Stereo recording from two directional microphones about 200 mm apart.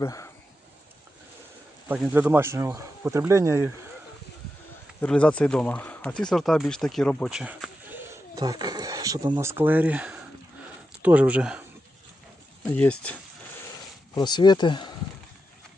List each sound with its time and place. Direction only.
0.0 s speech: 15° left (ahead or behind)
1.9 s speech: 10° right (ahead or behind)
4.9 s speech: 5° left (ahead or behind)
12.7 s speech: 5° left (ahead or behind)
14.2 s speech: 20° left (ahead or behind)